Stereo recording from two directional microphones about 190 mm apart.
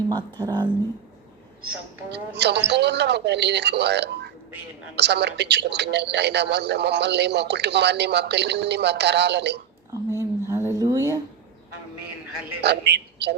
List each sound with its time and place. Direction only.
0.1 s speech: 20° right (ahead or behind)
2.0 s a man's voice: 65° right (ahead or behind)
10.2 s a sound: 15° right (ahead or behind)
12.6 s a man's voice: 60° right (ahead or behind)